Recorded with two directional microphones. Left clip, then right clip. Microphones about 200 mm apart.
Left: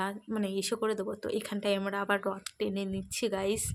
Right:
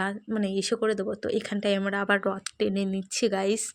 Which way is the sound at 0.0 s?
25° right (ahead or behind).